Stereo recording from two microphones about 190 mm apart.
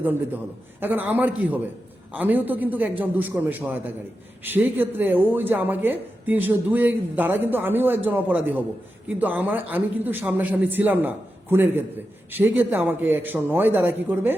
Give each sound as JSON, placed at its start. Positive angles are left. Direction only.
{"t": 0.8, "sound": "speech", "side_deg": -10}